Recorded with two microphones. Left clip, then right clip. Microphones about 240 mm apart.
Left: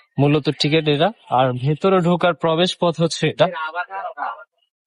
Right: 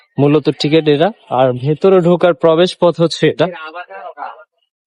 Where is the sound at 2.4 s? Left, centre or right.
Right.